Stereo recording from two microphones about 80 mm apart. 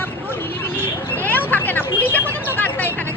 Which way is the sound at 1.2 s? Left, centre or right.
Left.